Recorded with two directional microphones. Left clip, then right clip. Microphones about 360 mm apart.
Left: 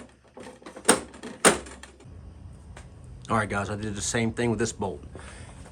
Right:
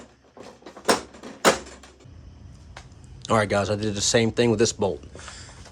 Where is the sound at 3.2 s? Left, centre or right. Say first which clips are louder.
Right 5 dB; centre.